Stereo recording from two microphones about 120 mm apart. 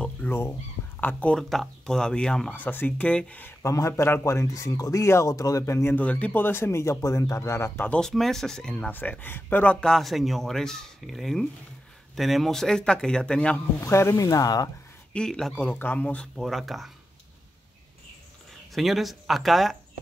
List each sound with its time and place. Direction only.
0.0 s a sound: 15° left (ahead or behind)
1.0 s speech: 10° left (ahead or behind)
3.6 s speech: 25° left (ahead or behind)
5.9 s speech: 10° left (ahead or behind)
7.9 s speech: 5° left (ahead or behind)
13.7 s speech: 20° left (ahead or behind)
15.1 s speech: 5° left (ahead or behind)
16.3 s speech: centre (ahead or behind)
18.7 s speech: centre (ahead or behind)